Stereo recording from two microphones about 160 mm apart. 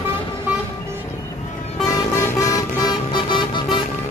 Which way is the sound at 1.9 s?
20° left (ahead or behind).